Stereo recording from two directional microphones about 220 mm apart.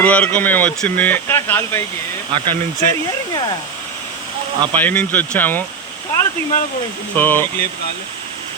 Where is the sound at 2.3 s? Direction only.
20° right (ahead or behind).